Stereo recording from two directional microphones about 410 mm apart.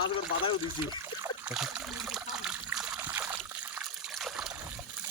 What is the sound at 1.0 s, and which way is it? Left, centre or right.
Trickle, centre.